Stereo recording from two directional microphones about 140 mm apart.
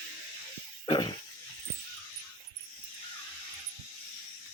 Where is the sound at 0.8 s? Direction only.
35° left (ahead or behind).